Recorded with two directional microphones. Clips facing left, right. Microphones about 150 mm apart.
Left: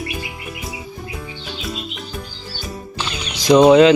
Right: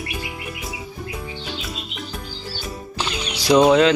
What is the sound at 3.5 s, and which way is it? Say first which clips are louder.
Speech: left 4 dB; centre (ahead or behind).